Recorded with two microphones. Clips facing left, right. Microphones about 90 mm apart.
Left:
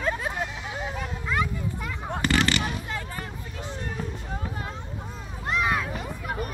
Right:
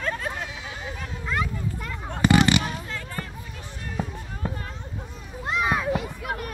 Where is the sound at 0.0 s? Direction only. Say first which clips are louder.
Left 2 dB; 15° left (ahead or behind).